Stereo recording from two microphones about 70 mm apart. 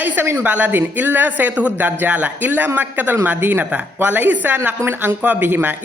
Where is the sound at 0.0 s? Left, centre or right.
Right.